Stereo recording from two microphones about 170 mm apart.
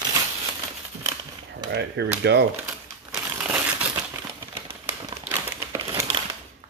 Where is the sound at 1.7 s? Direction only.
80° right.